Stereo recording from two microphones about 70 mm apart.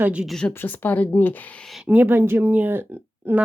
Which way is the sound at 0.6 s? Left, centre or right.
Left.